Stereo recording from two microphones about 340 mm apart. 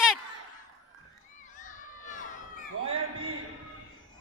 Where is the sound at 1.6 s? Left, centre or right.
Left.